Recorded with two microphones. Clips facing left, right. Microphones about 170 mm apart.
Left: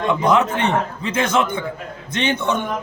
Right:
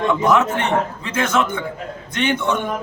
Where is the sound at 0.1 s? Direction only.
15° left (ahead or behind).